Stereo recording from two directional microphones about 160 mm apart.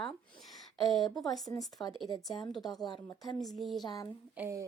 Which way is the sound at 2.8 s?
25° left (ahead or behind).